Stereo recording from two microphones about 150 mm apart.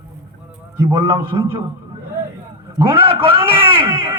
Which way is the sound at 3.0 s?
40° right (ahead or behind).